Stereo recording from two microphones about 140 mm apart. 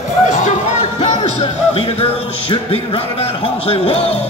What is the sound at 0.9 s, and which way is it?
Music, 50° left (ahead or behind).